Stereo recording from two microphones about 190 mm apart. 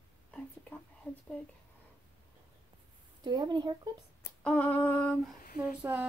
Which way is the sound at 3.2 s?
25° right (ahead or behind).